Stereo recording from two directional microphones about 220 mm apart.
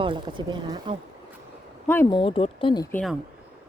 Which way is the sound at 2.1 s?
25° left (ahead or behind).